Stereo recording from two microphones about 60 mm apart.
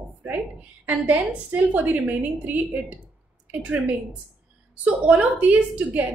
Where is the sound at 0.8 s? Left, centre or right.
Right.